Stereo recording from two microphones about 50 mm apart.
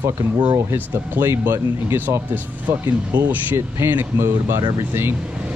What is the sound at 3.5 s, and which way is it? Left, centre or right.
Speech, right.